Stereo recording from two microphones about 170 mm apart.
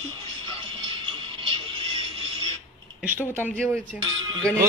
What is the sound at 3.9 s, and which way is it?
Speech, 5° right (ahead or behind).